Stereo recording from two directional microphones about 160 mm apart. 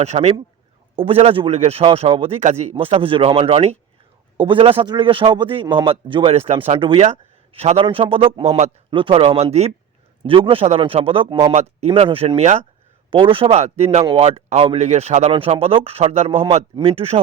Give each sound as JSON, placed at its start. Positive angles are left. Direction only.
{"t": 0.0, "sound": "a man's voice", "side_deg": -45}
{"t": 11.5, "sound": "a man's voice", "side_deg": -40}